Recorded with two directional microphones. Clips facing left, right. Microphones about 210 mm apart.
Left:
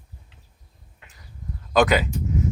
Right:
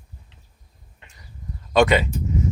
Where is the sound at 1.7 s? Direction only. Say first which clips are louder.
Right 2 dB; centre (ahead or behind).